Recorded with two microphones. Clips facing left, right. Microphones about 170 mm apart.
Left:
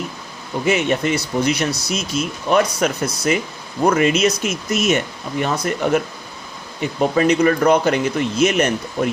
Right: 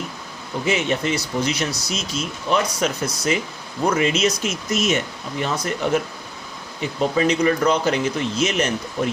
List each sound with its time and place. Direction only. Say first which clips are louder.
0.6 s speech: left 4 dB; 55° left (ahead or behind)
7.0 s speech: left 3 dB; 50° left (ahead or behind)